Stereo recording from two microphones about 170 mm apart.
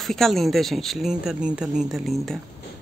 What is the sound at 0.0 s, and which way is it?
Speech, centre (ahead or behind).